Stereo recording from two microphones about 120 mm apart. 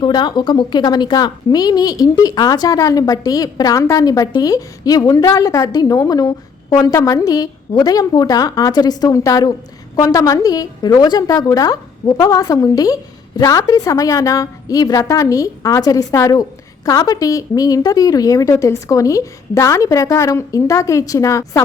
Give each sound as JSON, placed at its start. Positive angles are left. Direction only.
{"t": 0.0, "sound": "a woman's voice", "side_deg": 40}